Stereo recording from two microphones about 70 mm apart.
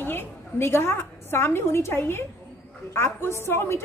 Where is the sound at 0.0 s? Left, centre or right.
Left.